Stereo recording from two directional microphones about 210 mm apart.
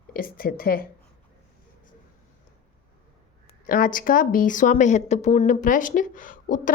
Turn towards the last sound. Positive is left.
turn(degrees=40)  # may be behind; listen again after turning